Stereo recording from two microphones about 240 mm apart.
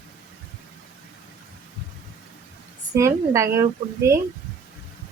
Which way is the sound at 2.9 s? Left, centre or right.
Centre.